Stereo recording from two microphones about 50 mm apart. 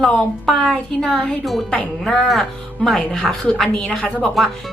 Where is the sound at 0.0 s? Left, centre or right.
Centre.